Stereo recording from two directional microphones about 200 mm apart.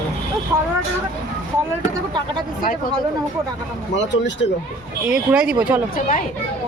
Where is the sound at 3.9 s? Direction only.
65° left (ahead or behind).